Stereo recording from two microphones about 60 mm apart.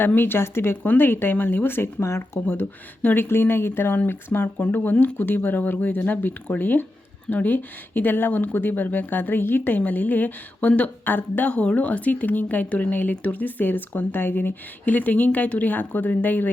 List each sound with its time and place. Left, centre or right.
0.0 s speech: left
0.8 s speech: left
3.0 s speech: left
3.2 s speech: left